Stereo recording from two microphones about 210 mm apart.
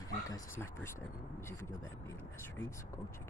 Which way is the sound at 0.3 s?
15° left (ahead or behind).